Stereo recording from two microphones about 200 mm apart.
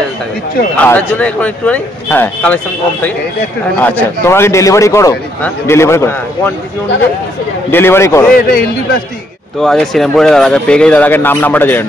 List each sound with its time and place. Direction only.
0.8 s a man's voice: 10° left (ahead or behind)
7.7 s a man's voice: 10° left (ahead or behind)
8.4 s a man's voice: 45° left (ahead or behind)
9.6 s speech: centre (ahead or behind)